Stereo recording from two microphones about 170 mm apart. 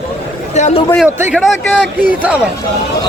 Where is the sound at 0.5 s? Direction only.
40° left (ahead or behind).